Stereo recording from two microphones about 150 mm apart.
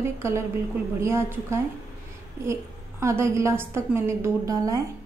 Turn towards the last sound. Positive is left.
turn(degrees=-25)  # may be behind; listen again after turning